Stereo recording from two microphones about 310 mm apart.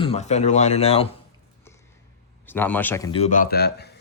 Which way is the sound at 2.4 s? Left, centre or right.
Centre.